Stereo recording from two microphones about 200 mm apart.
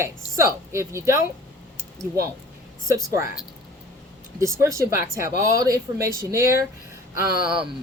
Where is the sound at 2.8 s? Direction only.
15° right (ahead or behind).